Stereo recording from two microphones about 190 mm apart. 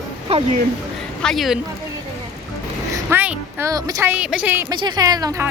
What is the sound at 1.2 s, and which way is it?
Speech, centre (ahead or behind).